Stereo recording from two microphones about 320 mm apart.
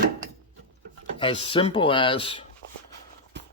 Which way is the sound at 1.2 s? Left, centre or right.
Centre.